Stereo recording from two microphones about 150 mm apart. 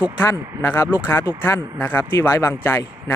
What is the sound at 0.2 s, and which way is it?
Speech, 15° left (ahead or behind).